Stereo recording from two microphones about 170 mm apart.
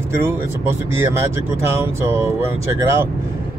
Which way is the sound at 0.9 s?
15° right (ahead or behind).